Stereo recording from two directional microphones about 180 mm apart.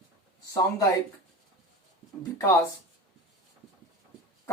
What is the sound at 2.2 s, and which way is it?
Speech, 15° left (ahead or behind).